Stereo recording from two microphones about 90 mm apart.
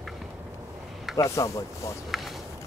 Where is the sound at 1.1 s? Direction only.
35° left (ahead or behind).